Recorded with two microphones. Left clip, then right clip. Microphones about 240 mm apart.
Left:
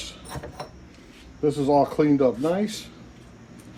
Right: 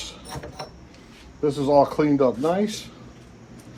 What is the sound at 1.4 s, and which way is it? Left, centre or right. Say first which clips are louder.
Speech: right 2 dB; right.